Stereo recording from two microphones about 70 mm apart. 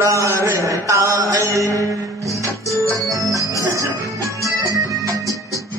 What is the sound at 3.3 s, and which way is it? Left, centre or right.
Music, right.